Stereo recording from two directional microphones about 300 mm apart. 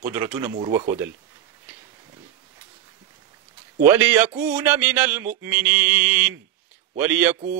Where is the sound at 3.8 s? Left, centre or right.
Centre.